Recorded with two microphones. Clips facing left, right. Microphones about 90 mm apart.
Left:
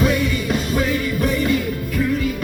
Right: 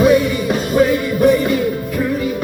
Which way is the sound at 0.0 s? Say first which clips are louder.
Right 7 dB; 20° right (ahead or behind).